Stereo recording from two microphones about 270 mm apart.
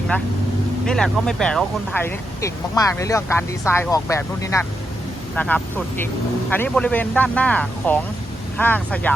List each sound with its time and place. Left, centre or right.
0.9 s speech: centre